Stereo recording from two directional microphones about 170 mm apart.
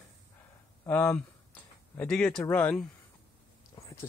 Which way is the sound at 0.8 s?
10° left (ahead or behind).